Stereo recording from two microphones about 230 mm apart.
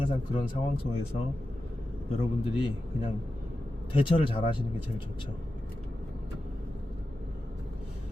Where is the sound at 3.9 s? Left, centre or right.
Left.